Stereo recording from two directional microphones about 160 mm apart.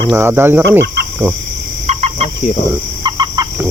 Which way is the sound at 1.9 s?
40° right (ahead or behind).